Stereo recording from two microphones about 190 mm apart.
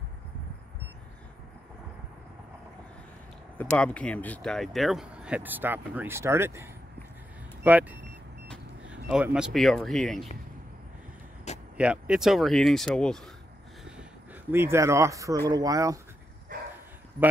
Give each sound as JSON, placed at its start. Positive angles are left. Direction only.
{"t": 3.5, "sound": "speech", "side_deg": 5}
{"t": 11.7, "sound": "speech", "side_deg": -5}
{"t": 14.5, "sound": "speech", "side_deg": -15}